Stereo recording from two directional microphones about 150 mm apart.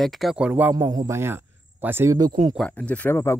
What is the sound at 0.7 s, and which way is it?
Speech, 25° right (ahead or behind).